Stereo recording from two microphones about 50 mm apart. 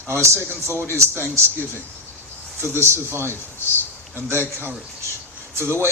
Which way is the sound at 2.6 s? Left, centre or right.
Right.